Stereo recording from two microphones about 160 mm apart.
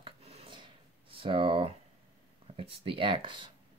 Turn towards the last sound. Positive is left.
turn(degrees=-30)  # may be behind; listen again after turning